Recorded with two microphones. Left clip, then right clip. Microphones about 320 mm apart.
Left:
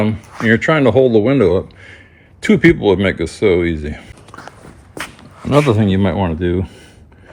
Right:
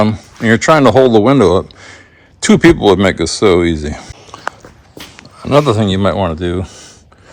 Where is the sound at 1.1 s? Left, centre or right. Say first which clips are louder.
Right 4 dB; centre.